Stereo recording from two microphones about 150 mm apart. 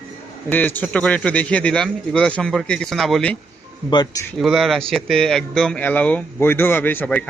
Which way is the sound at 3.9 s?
30° left (ahead or behind).